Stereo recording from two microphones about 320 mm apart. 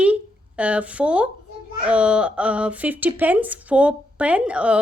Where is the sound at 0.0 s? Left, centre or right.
Centre.